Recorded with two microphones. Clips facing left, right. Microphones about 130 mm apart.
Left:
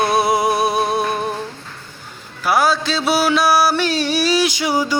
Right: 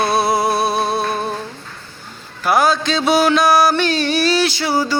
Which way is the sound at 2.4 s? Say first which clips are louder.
Right 1 dB; 5° left (ahead or behind).